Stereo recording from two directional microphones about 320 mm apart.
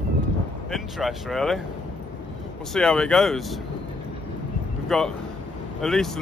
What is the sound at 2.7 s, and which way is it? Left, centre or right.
Speech, centre.